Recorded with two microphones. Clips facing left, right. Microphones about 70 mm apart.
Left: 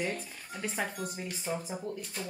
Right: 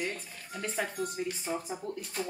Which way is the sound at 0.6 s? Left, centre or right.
Centre.